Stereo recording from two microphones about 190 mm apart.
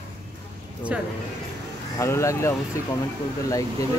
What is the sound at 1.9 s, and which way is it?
Speech, 15° left (ahead or behind).